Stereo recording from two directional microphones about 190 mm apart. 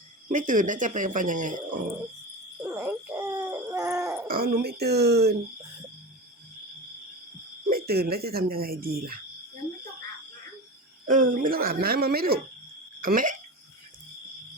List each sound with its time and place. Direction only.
0.3 s speech: 45° right (ahead or behind)
2.6 s owl: 10° right (ahead or behind)
3.4 s hoot: 10° right (ahead or behind)
4.3 s speech: 55° right (ahead or behind)
7.7 s speech: 55° right (ahead or behind)
11.1 s speech: 45° right (ahead or behind)